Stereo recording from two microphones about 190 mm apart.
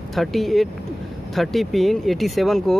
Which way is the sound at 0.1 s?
Centre (ahead or behind).